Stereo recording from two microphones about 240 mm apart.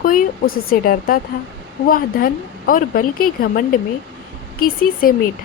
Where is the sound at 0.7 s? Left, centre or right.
Left.